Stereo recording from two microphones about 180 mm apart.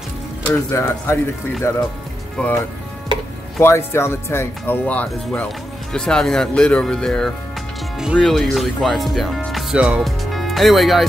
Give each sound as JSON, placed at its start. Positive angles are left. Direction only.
{"t": 0.5, "sound": "speech", "side_deg": 15}
{"t": 3.5, "sound": "speech", "side_deg": 15}